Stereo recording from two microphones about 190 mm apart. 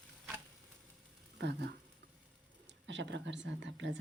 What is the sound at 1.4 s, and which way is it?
Speech, 65° right (ahead or behind).